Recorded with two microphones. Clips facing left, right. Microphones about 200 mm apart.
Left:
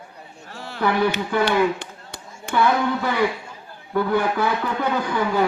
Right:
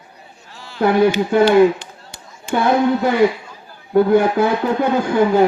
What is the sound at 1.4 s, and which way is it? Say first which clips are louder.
Chop: right 10 dB; 65° left (ahead or behind).